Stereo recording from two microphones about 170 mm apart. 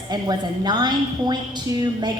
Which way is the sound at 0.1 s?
25° right (ahead or behind).